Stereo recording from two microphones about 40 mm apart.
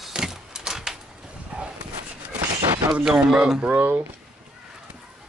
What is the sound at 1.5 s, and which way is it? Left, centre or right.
Dog, right.